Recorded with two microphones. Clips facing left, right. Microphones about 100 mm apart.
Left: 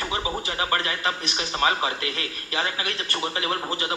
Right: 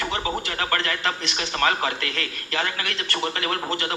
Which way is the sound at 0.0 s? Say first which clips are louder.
Right 1 dB; 15° left (ahead or behind).